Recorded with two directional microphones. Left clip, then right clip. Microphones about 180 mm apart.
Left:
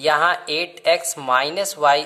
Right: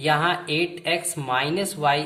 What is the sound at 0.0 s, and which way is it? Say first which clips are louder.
Speech: left 4 dB; 55° left (ahead or behind).